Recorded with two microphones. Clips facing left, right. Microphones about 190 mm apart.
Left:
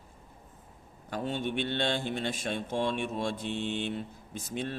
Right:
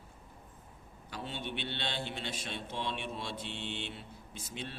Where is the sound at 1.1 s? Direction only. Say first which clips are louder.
Left 8 dB; 45° left (ahead or behind).